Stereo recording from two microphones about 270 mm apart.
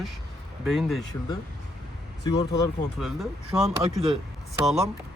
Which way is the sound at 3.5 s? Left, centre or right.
Centre.